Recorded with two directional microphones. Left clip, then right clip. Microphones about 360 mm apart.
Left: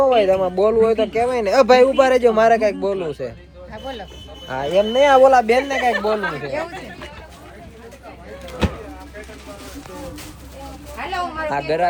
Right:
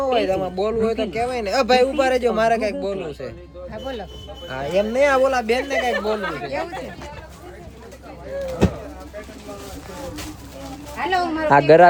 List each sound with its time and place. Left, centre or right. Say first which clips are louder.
0.0 s a man's voice: left 5 dB; centre
3.7 s a sound: even; centre
4.4 s speech: left 3 dB; centre
5.9 s speech: left 3 dB; centre
11.4 s a man's voice: right 10 dB; right